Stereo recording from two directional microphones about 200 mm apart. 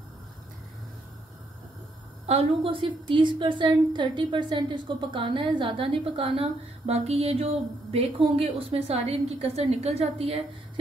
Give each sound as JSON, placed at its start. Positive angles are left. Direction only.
{"t": 2.2, "sound": "a woman's voice", "side_deg": -30}